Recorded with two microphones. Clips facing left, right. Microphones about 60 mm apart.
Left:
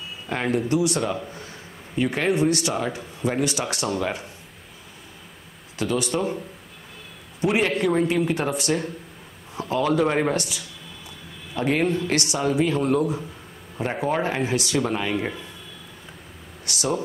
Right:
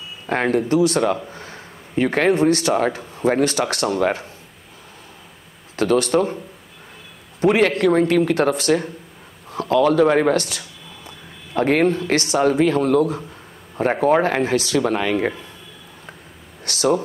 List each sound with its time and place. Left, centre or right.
0.3 s a man's voice: right
5.8 s speech: right
7.3 s a man's voice: right
9.5 s speech: right
16.6 s speech: right